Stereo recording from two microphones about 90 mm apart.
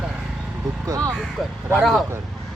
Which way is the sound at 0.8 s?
40° right (ahead or behind).